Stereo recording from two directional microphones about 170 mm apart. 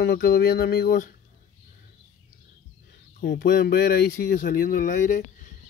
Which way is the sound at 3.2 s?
65° left (ahead or behind).